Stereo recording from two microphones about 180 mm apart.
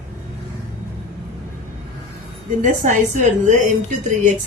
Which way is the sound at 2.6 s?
45° right (ahead or behind).